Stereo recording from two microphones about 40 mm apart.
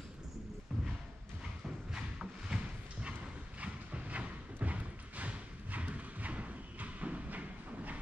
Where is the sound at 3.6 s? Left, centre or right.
Right.